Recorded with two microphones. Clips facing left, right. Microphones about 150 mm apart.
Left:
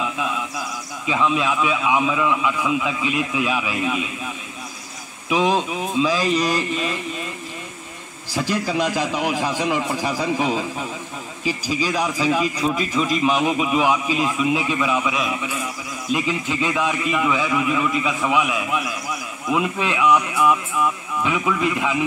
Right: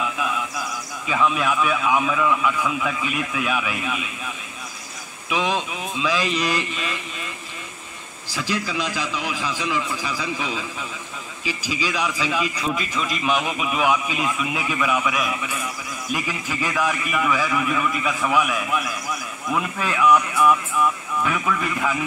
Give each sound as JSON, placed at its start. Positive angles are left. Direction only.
{"t": 0.0, "sound": "a sound", "side_deg": 20}
{"t": 1.0, "sound": "a man's voice", "side_deg": 20}
{"t": 5.3, "sound": "speech", "side_deg": 35}
{"t": 8.4, "sound": "a man's voice", "side_deg": 50}